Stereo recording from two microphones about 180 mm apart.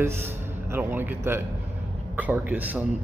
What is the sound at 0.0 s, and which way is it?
A man's voice, 15° right (ahead or behind).